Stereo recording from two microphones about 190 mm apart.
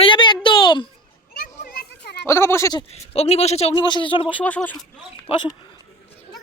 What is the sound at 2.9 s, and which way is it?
A man's voice, 35° left (ahead or behind).